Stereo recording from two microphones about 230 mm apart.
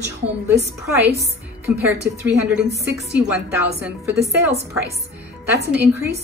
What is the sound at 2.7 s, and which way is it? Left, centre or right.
Speech, right.